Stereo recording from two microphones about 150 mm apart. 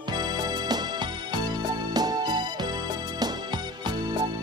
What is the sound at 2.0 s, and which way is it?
Music, 25° right (ahead or behind).